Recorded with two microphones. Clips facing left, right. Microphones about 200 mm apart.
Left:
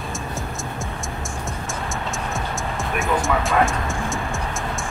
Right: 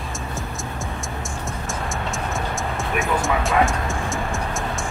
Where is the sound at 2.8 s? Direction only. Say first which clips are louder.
Left 1 dB; centre (ahead or behind).